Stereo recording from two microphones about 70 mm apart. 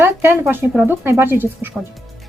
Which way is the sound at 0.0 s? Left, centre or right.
Right.